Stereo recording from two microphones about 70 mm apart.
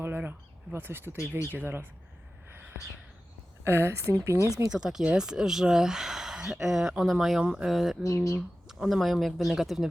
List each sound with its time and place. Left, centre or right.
0.0 s speech: right
3.6 s speech: right
4.7 s speech: centre
8.0 s speech: left
8.4 s speech: centre